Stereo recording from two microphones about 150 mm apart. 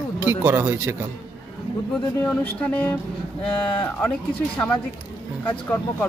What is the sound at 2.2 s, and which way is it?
Speech, 15° left (ahead or behind).